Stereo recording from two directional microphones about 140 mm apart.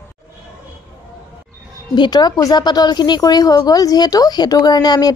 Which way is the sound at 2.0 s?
30° left (ahead or behind).